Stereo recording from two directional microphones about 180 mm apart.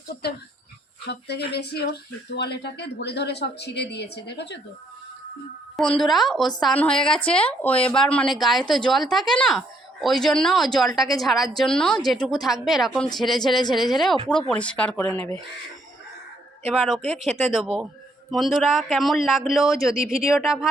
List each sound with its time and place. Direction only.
1.0 s a woman's voice: 65° left (ahead or behind)
5.7 s speech: centre (ahead or behind)
16.7 s speech: 5° right (ahead or behind)